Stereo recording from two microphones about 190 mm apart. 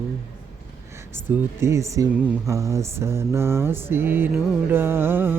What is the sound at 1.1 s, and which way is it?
Speech, 15° right (ahead or behind).